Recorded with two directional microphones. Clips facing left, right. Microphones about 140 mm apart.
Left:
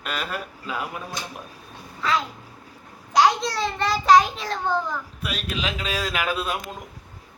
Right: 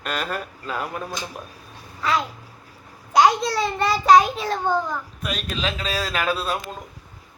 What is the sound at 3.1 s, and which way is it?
Speech, 5° right (ahead or behind).